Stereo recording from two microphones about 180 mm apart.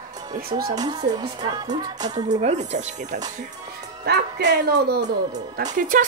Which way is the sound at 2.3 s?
40° right (ahead or behind).